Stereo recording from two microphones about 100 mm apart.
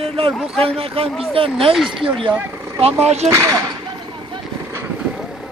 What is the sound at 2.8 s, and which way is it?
Speech, 90° right.